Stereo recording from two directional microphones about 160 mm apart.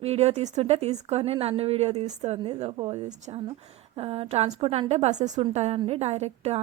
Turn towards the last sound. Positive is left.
turn(degrees=-40)  # may be behind; listen again after turning